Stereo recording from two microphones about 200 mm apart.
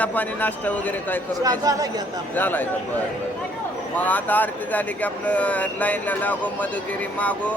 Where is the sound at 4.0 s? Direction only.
10° left (ahead or behind).